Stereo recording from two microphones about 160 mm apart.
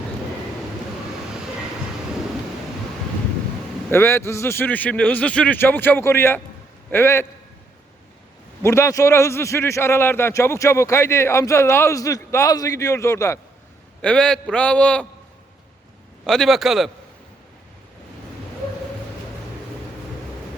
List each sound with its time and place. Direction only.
3.8 s a man's voice: 15° left (ahead or behind)
8.6 s a man's voice: 20° left (ahead or behind)
14.0 s a man's voice: 5° left (ahead or behind)
16.2 s speech: 5° left (ahead or behind)